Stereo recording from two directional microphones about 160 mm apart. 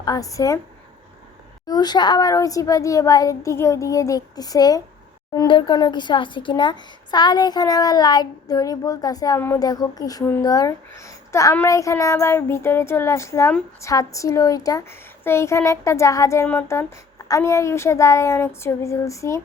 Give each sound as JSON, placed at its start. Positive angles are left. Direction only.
{"t": 0.0, "sound": "speech", "side_deg": 25}
{"t": 1.6, "sound": "speech", "side_deg": 25}